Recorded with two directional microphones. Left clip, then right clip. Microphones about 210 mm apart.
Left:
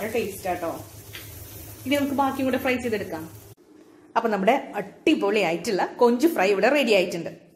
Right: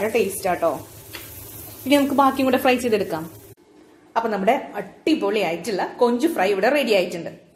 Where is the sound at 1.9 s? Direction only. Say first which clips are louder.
Right 6 dB; 35° right (ahead or behind).